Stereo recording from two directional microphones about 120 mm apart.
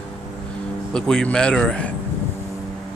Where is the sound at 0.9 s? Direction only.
5° left (ahead or behind).